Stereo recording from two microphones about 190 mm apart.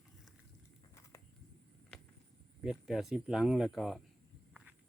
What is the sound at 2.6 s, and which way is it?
Speech, centre (ahead or behind).